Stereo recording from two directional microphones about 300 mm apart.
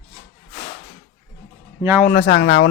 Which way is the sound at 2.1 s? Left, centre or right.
Left.